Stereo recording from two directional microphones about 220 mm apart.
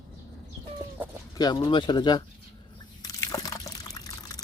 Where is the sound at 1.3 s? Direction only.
15° left (ahead or behind).